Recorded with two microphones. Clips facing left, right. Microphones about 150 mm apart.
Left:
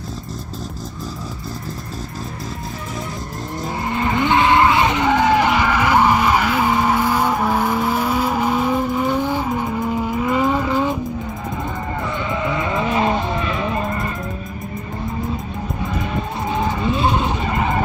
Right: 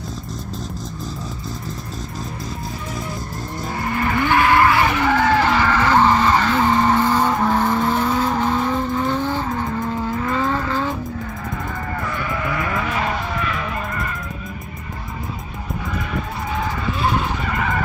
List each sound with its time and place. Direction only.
3.8 s vehicle: 20° left (ahead or behind)
12.3 s vehicle: 20° left (ahead or behind)
16.5 s vehicle: 20° left (ahead or behind)